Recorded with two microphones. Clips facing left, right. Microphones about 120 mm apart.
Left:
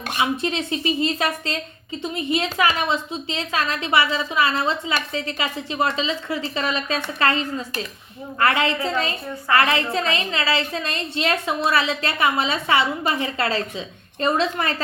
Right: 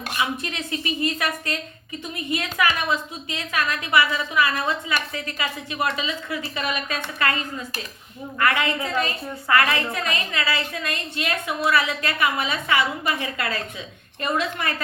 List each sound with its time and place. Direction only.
0.2 s a woman's voice: 25° left (ahead or behind)